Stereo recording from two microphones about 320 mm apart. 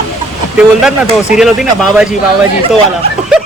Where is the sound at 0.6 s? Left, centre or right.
Centre.